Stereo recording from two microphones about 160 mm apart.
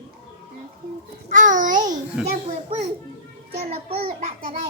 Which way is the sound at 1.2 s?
55° right (ahead or behind).